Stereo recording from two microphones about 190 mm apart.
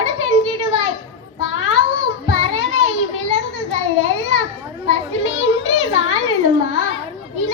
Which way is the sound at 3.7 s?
90° left.